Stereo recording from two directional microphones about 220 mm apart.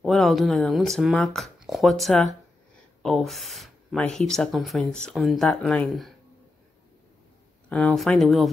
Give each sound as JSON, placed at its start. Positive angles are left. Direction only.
{"t": 0.0, "sound": "speech", "side_deg": 0}
{"t": 7.7, "sound": "speech", "side_deg": 0}